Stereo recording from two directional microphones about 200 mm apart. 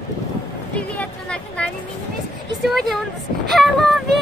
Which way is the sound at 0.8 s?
5° left (ahead or behind).